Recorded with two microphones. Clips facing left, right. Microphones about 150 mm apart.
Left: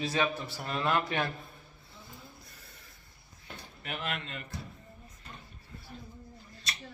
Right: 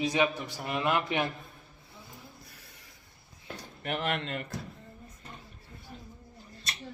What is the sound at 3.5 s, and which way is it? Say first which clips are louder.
Speech: right 6 dB; 40° right (ahead or behind).